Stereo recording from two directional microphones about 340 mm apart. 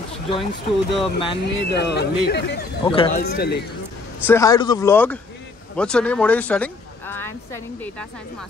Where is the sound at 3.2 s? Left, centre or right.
Left.